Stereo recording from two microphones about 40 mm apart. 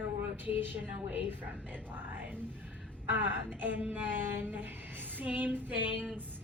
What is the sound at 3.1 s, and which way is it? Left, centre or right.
Speech, right.